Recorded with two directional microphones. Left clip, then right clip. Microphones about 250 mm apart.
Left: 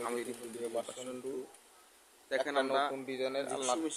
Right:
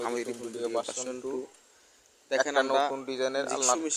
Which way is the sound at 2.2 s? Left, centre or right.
Centre.